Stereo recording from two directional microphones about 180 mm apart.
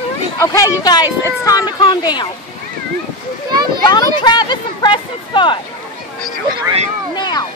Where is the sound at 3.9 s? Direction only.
25° left (ahead or behind).